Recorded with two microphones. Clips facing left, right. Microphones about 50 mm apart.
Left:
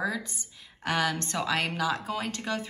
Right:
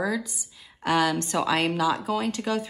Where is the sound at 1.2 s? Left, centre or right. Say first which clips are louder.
Right 5 dB; centre.